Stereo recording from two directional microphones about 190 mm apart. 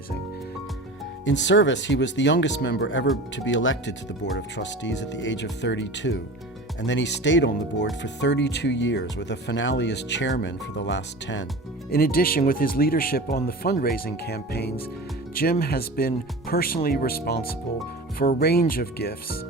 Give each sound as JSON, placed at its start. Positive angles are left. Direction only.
{"t": 1.2, "sound": "speech", "side_deg": 70}
{"t": 4.4, "sound": "speech", "side_deg": 70}
{"t": 11.9, "sound": "speech", "side_deg": 50}